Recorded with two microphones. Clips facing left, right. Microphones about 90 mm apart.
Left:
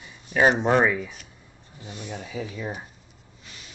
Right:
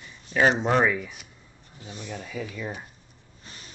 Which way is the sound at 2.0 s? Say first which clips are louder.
Left 1 dB; 15° left (ahead or behind).